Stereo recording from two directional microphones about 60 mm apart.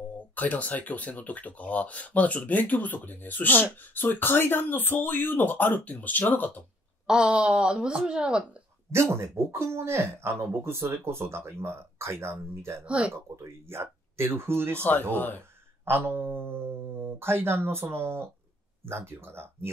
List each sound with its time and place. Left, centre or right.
0.4 s speech: left
7.1 s speech: centre
8.9 s speech: right
12.8 s speech: centre
13.1 s speech: right
14.8 s speech: left
16.0 s speech: right